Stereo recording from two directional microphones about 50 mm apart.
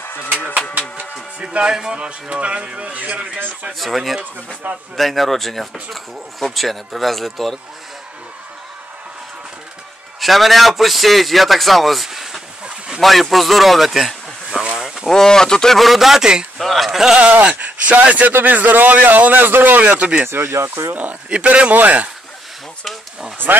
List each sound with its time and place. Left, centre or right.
1.4 s speech: centre
3.8 s a man's voice: centre
10.2 s a man's voice: centre
12.6 s a sound: centre
13.0 s speech: centre
15.0 s speech: centre
15.8 s a man's voice: centre
16.5 s a man's voice: centre
17.0 s a man's voice: centre
17.3 s a man's voice: right
20.0 s speech: right
20.2 s speech: right
20.9 s a man's voice: right